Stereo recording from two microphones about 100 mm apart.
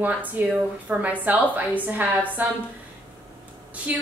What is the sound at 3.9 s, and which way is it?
Speech, 15° right (ahead or behind).